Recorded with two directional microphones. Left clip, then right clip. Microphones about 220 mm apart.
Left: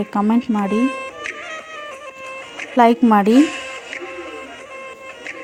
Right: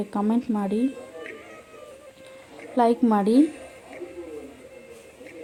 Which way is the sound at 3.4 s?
50° left (ahead or behind).